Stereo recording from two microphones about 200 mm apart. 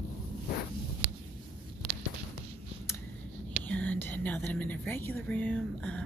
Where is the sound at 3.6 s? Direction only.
5° left (ahead or behind).